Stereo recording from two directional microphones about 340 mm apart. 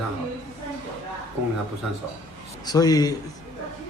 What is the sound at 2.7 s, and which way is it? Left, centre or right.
Speech, centre.